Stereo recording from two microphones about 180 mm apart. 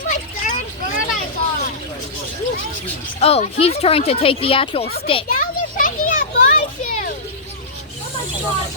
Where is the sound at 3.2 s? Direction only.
35° left (ahead or behind).